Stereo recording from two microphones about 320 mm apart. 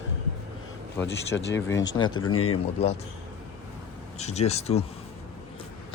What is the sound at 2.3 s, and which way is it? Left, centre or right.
Speech, left.